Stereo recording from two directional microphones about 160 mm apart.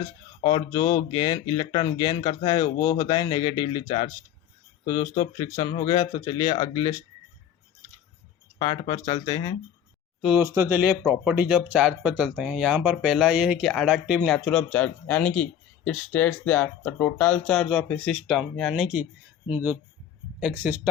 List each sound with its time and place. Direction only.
0.4 s speech: 25° left (ahead or behind)
8.5 s speech: 30° left (ahead or behind)
10.2 s speech: 5° right (ahead or behind)
10.4 s speech: 15° right (ahead or behind)